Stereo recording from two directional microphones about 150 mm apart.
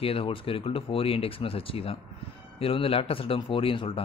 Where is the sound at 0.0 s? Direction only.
40° left (ahead or behind).